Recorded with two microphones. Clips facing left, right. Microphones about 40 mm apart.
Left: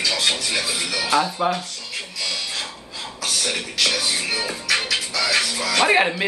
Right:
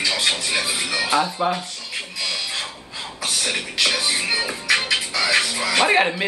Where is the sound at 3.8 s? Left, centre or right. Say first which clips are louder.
Right 1 dB; centre.